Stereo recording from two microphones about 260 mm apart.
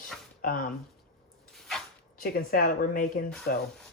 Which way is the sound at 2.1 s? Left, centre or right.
Left.